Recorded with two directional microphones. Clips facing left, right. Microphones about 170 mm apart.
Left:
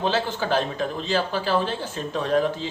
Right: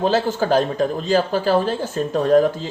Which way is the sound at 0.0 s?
45° right (ahead or behind).